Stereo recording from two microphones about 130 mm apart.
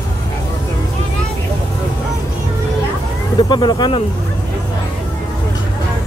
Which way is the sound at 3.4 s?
35° left (ahead or behind).